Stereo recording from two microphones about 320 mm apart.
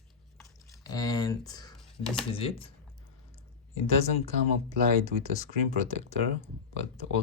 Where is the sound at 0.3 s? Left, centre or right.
Centre.